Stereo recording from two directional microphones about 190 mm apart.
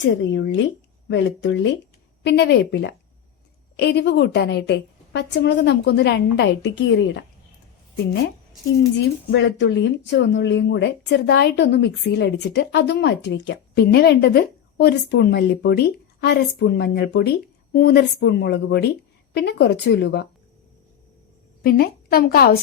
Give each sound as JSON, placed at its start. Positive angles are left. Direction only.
{"t": 0.3, "sound": "speech", "side_deg": 70}
{"t": 9.3, "sound": "speech", "side_deg": 65}
{"t": 17.7, "sound": "speech", "side_deg": 55}
{"t": 21.6, "sound": "a woman's voice", "side_deg": 55}